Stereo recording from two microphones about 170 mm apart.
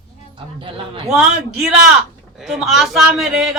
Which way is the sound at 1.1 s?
5° right (ahead or behind).